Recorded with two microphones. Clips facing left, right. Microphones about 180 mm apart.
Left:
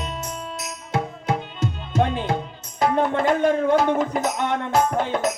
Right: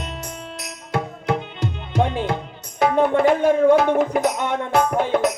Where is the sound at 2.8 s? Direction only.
60° right (ahead or behind).